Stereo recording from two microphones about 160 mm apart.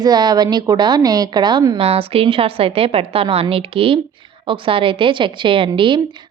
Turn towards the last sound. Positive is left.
turn(degrees=-30)  # may be behind; listen again after turning